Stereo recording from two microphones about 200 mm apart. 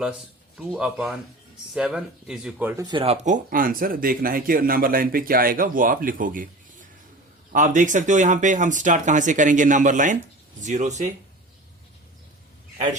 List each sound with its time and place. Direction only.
0.0 s speech: 5° right (ahead or behind)
2.8 s speech: 25° right (ahead or behind); by 6.5 s 40° right (ahead or behind)
7.5 s speech: 40° right (ahead or behind)